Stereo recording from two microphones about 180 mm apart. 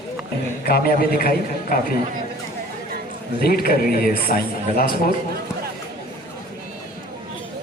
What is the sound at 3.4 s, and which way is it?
A man's voice, 55° left (ahead or behind).